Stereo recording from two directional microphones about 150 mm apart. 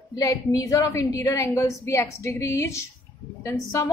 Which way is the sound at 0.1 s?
25° left (ahead or behind).